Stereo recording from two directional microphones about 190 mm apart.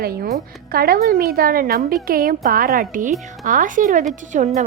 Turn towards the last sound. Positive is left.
turn(degrees=-40)  # may be behind; listen again after turning